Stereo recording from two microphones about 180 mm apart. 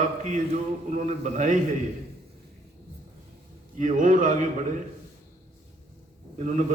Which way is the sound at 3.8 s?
45° right (ahead or behind).